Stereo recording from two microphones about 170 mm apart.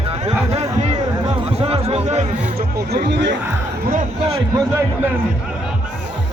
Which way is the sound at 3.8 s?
55° right (ahead or behind).